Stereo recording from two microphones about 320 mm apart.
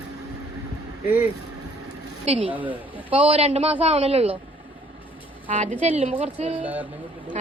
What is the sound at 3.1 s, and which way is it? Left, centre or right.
A woman's voice, centre.